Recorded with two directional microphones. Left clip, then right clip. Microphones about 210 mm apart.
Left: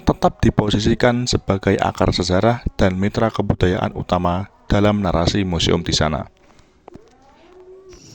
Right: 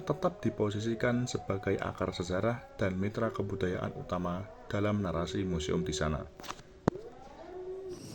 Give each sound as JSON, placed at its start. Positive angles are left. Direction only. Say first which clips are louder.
{"t": 0.0, "sound": "speech", "louder": "left 15 dB", "side_deg": 45}